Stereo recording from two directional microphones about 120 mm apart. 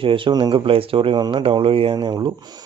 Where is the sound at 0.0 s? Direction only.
45° right (ahead or behind).